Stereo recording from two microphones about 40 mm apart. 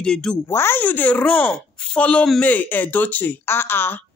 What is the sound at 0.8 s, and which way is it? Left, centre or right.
Speech, left.